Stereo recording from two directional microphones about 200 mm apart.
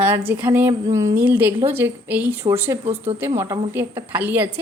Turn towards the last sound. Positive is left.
turn(degrees=-10)  # may be behind; listen again after turning